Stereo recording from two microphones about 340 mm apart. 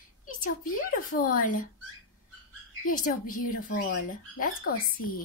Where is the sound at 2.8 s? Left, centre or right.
Left.